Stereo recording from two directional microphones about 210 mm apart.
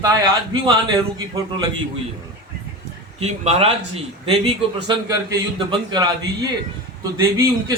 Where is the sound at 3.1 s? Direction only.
30° right (ahead or behind).